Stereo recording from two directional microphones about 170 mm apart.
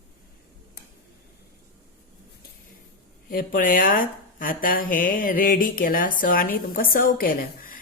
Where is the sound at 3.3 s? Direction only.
55° left (ahead or behind).